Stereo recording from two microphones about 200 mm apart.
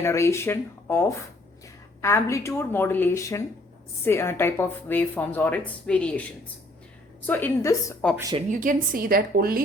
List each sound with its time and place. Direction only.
0.0 s speech: 15° left (ahead or behind)
7.3 s speech: 10° left (ahead or behind)
8.1 s speech: 15° right (ahead or behind)
8.4 s a woman's voice: 40° right (ahead or behind)